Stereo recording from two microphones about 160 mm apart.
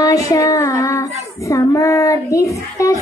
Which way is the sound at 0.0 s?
20° left (ahead or behind).